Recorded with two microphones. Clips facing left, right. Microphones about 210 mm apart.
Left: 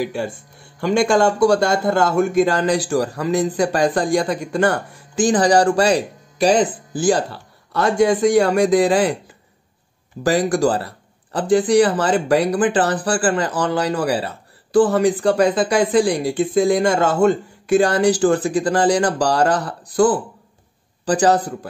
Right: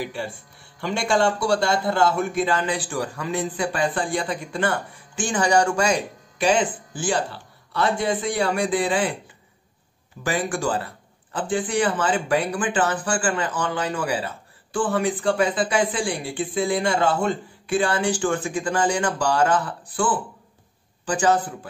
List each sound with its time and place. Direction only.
0.0 s speech: 45° left (ahead or behind)
10.2 s a man's voice: 40° left (ahead or behind)